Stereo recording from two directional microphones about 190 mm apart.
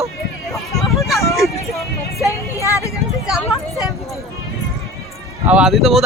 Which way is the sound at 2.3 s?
15° left (ahead or behind).